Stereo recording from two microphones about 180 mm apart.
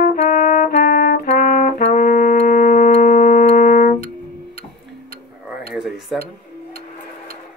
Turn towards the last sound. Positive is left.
turn(degrees=0)  # may be behind; listen again after turning